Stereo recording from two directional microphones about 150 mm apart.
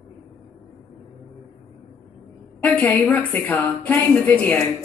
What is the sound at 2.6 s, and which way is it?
A woman's voice, 10° left (ahead or behind).